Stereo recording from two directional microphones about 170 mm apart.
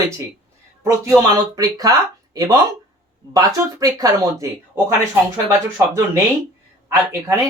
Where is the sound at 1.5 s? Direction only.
20° right (ahead or behind).